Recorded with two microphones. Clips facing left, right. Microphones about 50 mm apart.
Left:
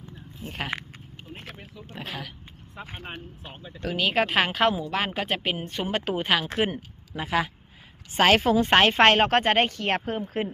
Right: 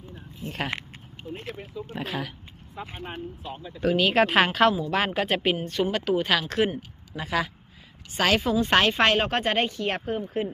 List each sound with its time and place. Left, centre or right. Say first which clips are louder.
0.4 s speech: right 2 dB; centre
1.9 s speech: right 4 dB; centre
3.8 s speech: right 4 dB; centre
5.5 s speech: right 5 dB; left
5.9 s a woman's voice: left 1 dB; left
8.1 s a woman's voice: left 4 dB; left
8.4 s speech: left 3 dB; left
8.6 s speech: left 3 dB; left